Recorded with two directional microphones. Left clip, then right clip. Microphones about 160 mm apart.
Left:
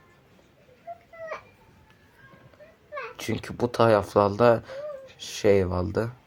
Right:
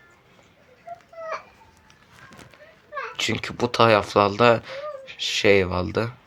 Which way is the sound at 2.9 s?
5° left (ahead or behind).